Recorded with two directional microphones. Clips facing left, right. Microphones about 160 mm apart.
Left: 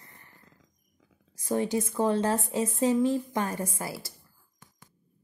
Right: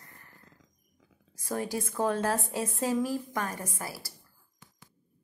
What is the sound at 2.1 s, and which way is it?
Speech, 15° left (ahead or behind).